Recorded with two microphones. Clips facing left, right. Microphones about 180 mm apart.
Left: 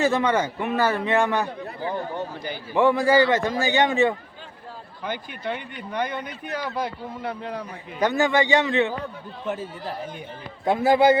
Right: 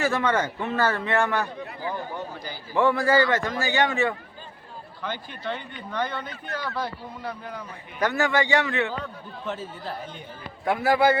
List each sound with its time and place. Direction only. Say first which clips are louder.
0.0 s a man's voice: left 3 dB; 20° left (ahead or behind)
10.7 s speech: left 3 dB; 20° left (ahead or behind)